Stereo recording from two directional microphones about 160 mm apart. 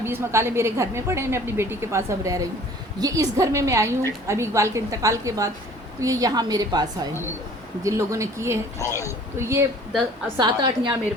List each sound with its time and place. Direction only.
0.0 s a woman's voice: 15° right (ahead or behind)
8.8 s a man's voice: 20° left (ahead or behind)
9.0 s a woman's voice: 15° right (ahead or behind)